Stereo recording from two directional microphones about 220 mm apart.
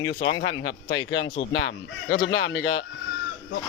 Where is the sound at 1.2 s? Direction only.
25° left (ahead or behind).